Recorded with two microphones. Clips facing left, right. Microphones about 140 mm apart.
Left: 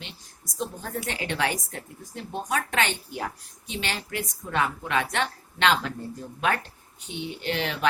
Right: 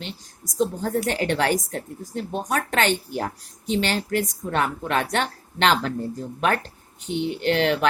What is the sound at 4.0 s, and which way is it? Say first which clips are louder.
Speech: right 9 dB; 40° right (ahead or behind).